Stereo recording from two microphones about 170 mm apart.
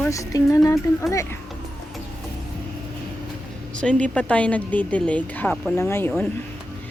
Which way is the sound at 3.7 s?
5° left (ahead or behind).